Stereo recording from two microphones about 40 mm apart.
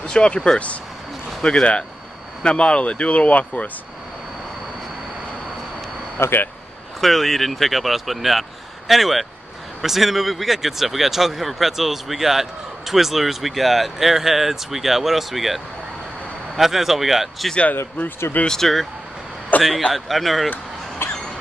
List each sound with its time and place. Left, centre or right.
0.0 s speech: left
6.1 s speech: left
7.0 s speech: centre
18.5 s speech: centre
19.5 s a sound: left
19.9 s speech: centre
21.0 s a sound: left